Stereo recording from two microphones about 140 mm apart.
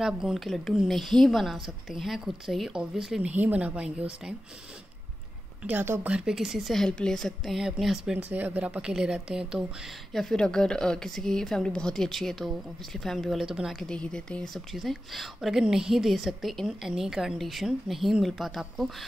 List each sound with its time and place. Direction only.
0.0 s a woman's voice: 5° right (ahead or behind)
5.6 s a woman's voice: 10° right (ahead or behind)